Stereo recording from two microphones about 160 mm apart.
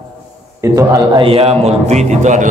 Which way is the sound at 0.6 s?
25° right (ahead or behind).